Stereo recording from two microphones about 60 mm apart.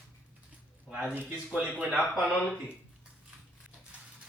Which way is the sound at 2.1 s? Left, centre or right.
Centre.